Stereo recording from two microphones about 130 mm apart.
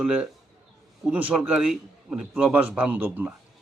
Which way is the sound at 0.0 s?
10° right (ahead or behind).